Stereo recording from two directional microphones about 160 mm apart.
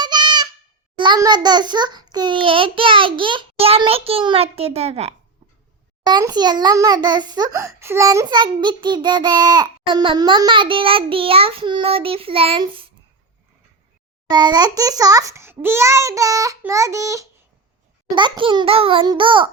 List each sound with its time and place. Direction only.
0.0 s a sound: 30° right (ahead or behind)
0.9 s a child's voice: 30° right (ahead or behind)
6.1 s a child's voice: 25° right (ahead or behind)
14.3 s a child's voice: 25° right (ahead or behind)